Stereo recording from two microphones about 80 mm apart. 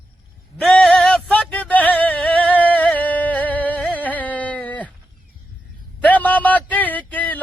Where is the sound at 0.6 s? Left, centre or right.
Centre.